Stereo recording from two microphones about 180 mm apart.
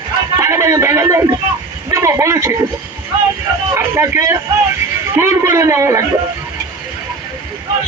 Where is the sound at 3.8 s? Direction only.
15° right (ahead or behind).